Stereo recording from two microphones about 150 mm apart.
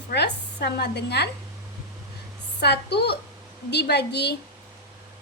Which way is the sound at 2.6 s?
90° left.